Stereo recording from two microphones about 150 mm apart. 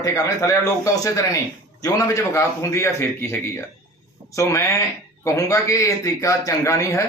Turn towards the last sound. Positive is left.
turn(degrees=20)  # may be behind; listen again after turning